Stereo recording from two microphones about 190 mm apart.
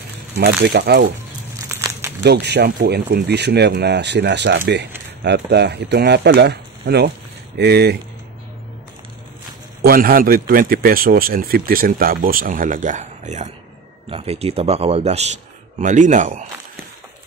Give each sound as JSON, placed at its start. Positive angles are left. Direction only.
{"t": 0.5, "sound": "speech", "side_deg": -60}
{"t": 1.7, "sound": "crumpling", "side_deg": -15}
{"t": 2.2, "sound": "speech", "side_deg": -60}
{"t": 9.8, "sound": "speech", "side_deg": -50}